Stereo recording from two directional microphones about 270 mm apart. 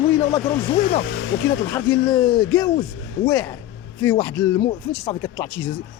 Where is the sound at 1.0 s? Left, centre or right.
Left.